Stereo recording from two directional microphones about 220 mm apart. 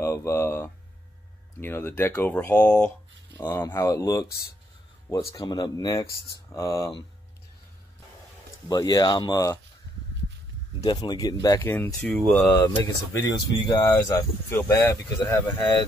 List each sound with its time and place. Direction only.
0.0 s speech: 10° left (ahead or behind)
8.6 s speech: 15° left (ahead or behind)
10.8 s speech: 20° left (ahead or behind)